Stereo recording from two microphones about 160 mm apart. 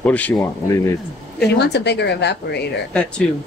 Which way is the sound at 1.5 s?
90° left.